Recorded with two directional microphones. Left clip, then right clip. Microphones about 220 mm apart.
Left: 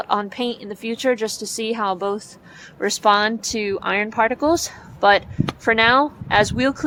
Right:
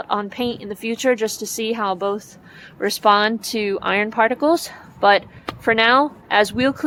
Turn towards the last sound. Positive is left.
turn(degrees=-5)  # may be behind; listen again after turning